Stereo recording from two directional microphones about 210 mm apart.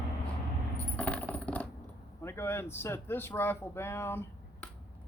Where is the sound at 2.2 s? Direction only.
10° left (ahead or behind).